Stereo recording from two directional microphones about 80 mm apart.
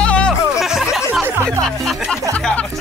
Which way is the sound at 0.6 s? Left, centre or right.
Centre.